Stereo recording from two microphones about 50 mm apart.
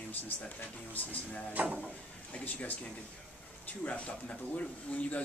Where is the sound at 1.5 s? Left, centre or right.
Right.